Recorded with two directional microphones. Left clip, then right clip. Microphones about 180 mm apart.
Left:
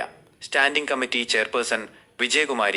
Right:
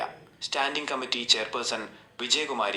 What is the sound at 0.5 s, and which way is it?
Speech, 30° left (ahead or behind).